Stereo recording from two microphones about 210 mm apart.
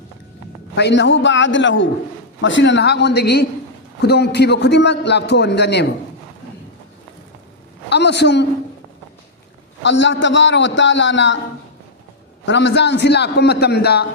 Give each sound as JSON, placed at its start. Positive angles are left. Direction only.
{"t": 0.8, "sound": "a man's voice", "side_deg": 55}
{"t": 7.9, "sound": "a woman's voice", "side_deg": 55}
{"t": 9.8, "sound": "a man's voice", "side_deg": 60}
{"t": 12.5, "sound": "a man's voice", "side_deg": 55}